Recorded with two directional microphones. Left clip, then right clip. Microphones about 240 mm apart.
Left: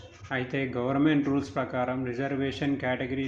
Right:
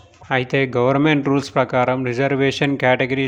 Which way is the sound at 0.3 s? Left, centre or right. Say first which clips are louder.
Right 12 dB; right.